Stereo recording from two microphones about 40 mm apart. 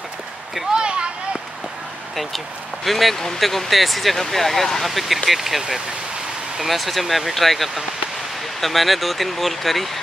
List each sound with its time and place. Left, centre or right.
0.7 s a sound: right
2.1 s speech: centre
6.6 s speech: centre